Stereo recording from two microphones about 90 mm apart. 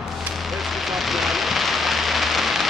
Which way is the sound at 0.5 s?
Centre (ahead or behind).